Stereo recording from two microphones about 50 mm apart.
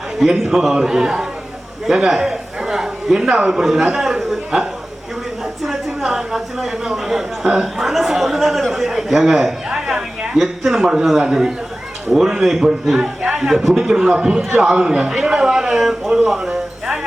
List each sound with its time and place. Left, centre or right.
0.2 s a man's voice: centre
10.3 s a man's voice: centre
13.0 s speech: right
13.5 s a man's voice: centre
16.5 s a sound: centre